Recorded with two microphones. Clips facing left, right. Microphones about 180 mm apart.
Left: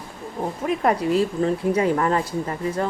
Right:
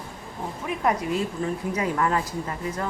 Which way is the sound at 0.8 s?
30° left (ahead or behind).